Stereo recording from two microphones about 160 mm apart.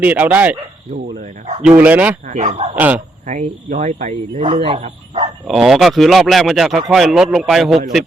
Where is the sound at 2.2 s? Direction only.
50° right (ahead or behind).